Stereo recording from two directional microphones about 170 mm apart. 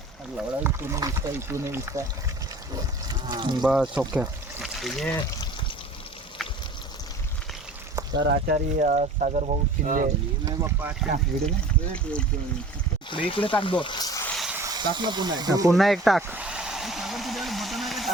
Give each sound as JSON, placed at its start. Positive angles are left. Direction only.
{"t": 0.3, "sound": "speech", "side_deg": -15}
{"t": 3.1, "sound": "a sound", "side_deg": -25}
{"t": 3.6, "sound": "speech", "side_deg": -5}
{"t": 8.1, "sound": "speech", "side_deg": -85}
{"t": 10.4, "sound": "speech", "side_deg": -15}
{"t": 13.1, "sound": "speech", "side_deg": 30}
{"t": 14.3, "sound": "a sound", "side_deg": 0}
{"t": 14.5, "sound": "speech", "side_deg": -20}
{"t": 15.7, "sound": "speech", "side_deg": 0}
{"t": 16.2, "sound": "vehicle", "side_deg": -10}